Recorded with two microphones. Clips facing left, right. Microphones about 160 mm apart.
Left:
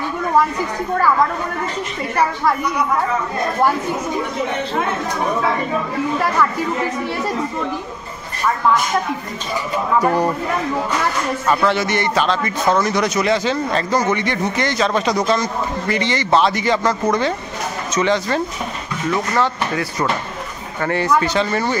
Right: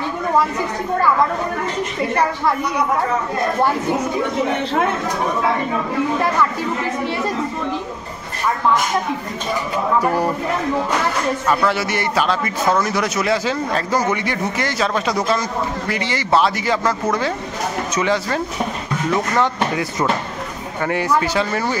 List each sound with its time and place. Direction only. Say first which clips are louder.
10.0 s speech: left 2 dB; 5° right (ahead or behind)
11.6 s a man's voice: left 2 dB; 5° right (ahead or behind)